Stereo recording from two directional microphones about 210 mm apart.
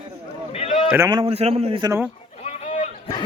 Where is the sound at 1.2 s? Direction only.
30° right (ahead or behind).